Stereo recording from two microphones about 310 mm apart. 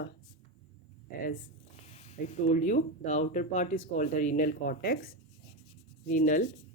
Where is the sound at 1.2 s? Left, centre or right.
Left.